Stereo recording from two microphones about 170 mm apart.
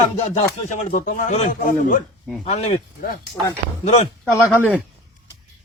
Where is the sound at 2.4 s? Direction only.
40° left (ahead or behind).